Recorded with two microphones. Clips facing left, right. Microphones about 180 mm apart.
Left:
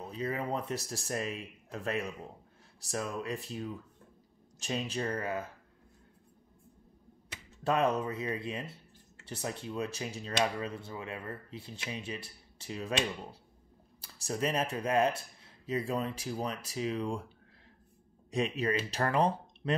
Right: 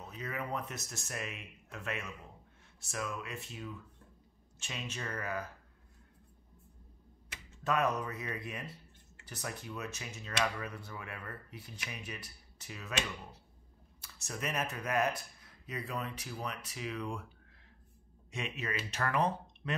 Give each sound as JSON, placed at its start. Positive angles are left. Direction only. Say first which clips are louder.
{"t": 0.0, "sound": "speech", "louder": "left 6 dB", "side_deg": 30}
{"t": 7.6, "sound": "speech", "louder": "left 3 dB", "side_deg": 30}
{"t": 18.3, "sound": "speech", "louder": "left 8 dB", "side_deg": 35}